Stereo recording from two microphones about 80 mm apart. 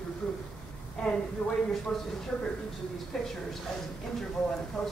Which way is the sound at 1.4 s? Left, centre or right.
Centre.